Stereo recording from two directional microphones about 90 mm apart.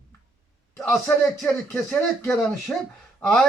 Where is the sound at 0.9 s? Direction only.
30° left (ahead or behind).